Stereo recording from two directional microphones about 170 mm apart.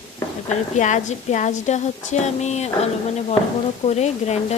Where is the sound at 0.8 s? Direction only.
45° left (ahead or behind).